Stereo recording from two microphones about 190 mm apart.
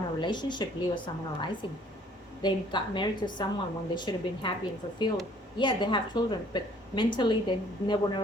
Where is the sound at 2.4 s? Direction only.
25° left (ahead or behind).